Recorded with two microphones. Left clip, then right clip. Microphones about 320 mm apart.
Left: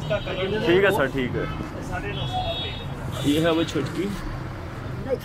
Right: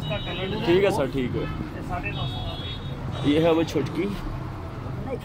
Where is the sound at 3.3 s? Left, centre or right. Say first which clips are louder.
Right 2 dB; centre.